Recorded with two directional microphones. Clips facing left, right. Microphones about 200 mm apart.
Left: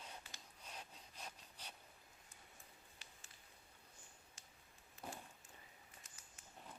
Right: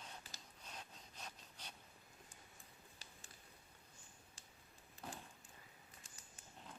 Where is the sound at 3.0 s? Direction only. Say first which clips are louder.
Right 2 dB; 35° right (ahead or behind).